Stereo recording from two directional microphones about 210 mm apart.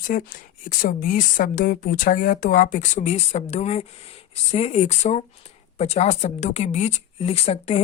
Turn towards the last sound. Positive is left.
turn(degrees=30)  # may be behind; listen again after turning